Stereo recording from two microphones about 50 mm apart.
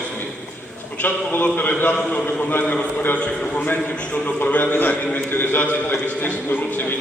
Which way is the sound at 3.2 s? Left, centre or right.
Left.